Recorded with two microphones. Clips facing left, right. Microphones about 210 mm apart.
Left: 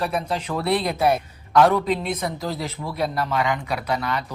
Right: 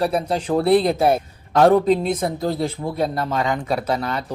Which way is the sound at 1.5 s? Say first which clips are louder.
Right 4 dB; 40° right (ahead or behind).